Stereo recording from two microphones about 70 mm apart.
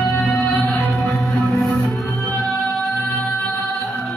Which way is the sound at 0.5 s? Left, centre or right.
Left.